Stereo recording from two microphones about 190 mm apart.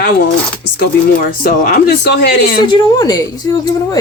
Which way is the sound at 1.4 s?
45° left (ahead or behind).